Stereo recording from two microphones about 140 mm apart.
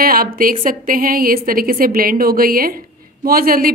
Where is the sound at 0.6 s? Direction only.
80° right.